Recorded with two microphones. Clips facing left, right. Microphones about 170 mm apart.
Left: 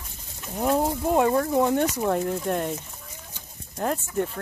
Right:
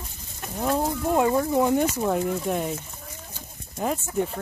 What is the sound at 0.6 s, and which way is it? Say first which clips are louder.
Speech: left 2 dB; 10° left (ahead or behind).